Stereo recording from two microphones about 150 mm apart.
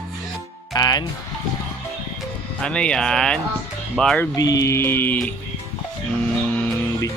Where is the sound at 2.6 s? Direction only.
5° left (ahead or behind).